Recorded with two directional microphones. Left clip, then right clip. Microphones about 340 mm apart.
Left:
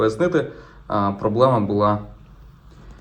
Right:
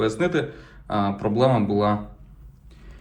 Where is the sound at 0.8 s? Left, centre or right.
Centre.